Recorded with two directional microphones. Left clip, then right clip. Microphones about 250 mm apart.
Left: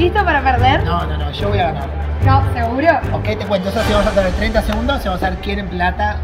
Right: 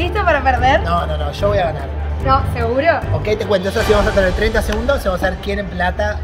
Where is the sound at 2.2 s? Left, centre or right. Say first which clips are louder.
Right 1 dB; right.